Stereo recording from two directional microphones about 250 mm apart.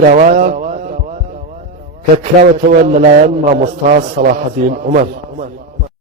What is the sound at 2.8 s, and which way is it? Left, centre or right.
A man's voice, right.